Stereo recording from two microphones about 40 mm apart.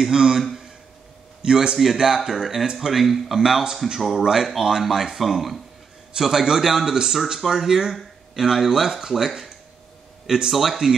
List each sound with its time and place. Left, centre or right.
0.1 s speech: centre
1.4 s a man's voice: right
2.0 s a man's voice: centre